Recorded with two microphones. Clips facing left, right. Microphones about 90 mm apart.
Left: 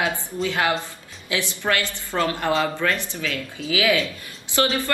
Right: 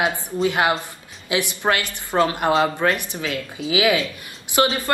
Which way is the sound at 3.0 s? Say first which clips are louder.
Right 2 dB; 15° right (ahead or behind).